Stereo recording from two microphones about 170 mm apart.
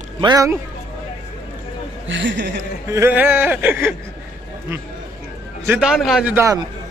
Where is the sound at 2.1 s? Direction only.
90° right.